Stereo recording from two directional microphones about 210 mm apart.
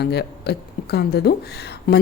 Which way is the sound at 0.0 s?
50° left (ahead or behind).